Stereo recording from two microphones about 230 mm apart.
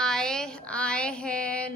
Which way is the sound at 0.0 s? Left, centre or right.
Centre.